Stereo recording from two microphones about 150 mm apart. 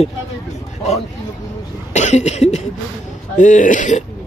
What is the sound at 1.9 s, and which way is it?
Speech, 50° left (ahead or behind).